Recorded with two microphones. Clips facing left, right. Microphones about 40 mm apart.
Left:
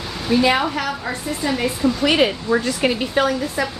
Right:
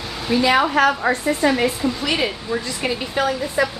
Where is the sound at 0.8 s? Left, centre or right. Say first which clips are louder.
Right 7 dB; right.